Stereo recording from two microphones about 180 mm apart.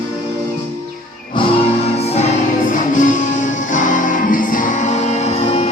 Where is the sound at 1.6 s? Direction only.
35° left (ahead or behind).